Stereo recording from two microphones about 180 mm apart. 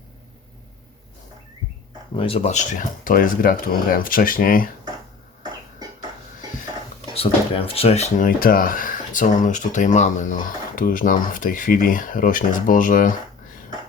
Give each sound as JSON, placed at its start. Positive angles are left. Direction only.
{"t": 2.1, "sound": "speech", "side_deg": 30}
{"t": 7.1, "sound": "speech", "side_deg": 30}
{"t": 8.4, "sound": "speech", "side_deg": 55}